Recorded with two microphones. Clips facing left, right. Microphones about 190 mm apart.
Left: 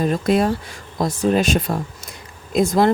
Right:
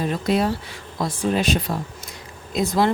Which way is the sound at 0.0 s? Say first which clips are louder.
Left 3 dB; 45° left (ahead or behind).